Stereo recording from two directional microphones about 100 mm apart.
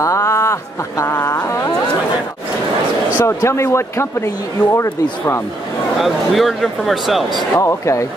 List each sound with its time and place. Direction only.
0.0 s a sound: 30° left (ahead or behind)
3.2 s speech: 30° left (ahead or behind)
5.9 s speech: centre (ahead or behind)
7.5 s speech: 30° left (ahead or behind)